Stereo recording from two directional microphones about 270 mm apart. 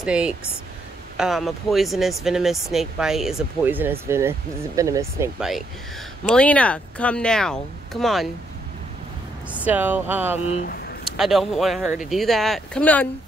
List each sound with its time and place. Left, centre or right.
0.0 s speech: centre
9.5 s speech: centre
10.4 s speech: left
11.1 s speech: centre